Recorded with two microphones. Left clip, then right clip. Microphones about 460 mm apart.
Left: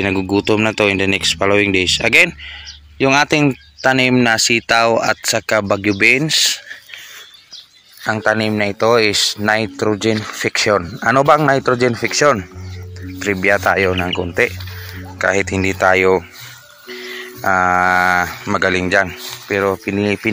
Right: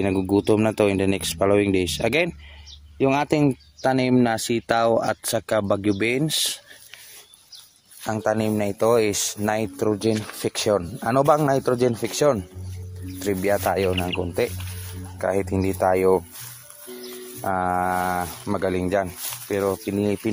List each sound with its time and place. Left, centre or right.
0.0 s speech: right
8.0 s speech: right
17.4 s speech: right